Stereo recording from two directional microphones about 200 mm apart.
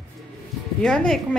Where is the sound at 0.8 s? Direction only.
5° left (ahead or behind).